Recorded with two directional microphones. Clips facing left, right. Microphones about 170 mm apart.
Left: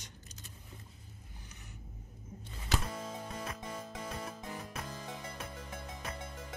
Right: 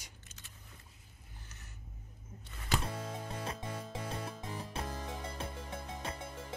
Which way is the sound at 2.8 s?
30° right (ahead or behind).